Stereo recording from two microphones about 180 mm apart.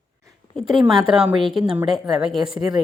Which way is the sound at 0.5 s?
Centre (ahead or behind).